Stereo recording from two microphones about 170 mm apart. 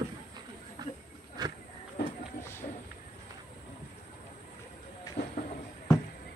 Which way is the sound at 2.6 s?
60° left (ahead or behind).